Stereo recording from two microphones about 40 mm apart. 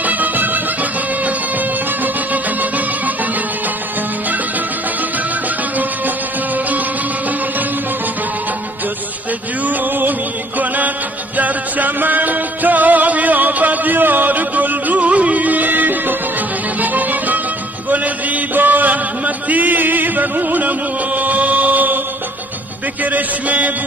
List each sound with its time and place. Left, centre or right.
0.0 s music: right
9.7 s music: right
11.3 s music: right
17.8 s chant: right
23.0 s music: right